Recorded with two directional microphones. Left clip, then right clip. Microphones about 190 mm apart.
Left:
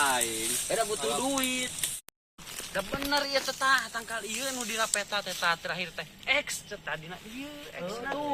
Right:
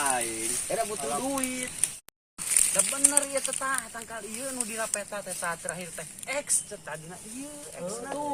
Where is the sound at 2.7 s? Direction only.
5° left (ahead or behind).